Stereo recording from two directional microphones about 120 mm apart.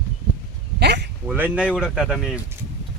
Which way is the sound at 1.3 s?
10° right (ahead or behind).